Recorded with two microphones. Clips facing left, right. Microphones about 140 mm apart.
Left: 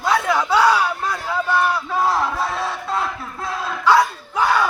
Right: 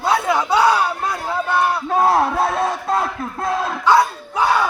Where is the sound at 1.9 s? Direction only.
55° right (ahead or behind).